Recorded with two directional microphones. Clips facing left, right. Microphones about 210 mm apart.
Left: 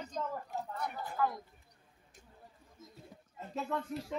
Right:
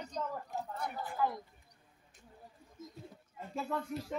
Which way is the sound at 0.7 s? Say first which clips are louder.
Left 1 dB; 25° right (ahead or behind).